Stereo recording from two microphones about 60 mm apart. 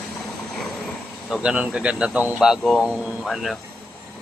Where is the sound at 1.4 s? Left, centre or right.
Centre.